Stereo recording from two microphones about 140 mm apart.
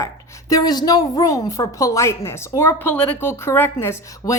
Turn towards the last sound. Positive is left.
turn(degrees=20)  # may be behind; listen again after turning